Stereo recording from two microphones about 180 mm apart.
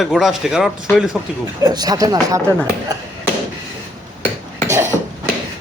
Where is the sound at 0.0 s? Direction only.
Centre (ahead or behind).